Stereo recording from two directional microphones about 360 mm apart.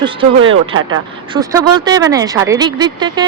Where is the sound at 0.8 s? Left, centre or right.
Right.